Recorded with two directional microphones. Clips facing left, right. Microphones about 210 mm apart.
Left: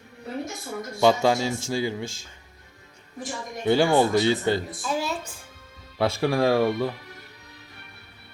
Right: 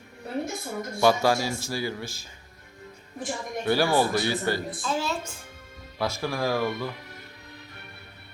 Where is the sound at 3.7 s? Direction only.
20° left (ahead or behind).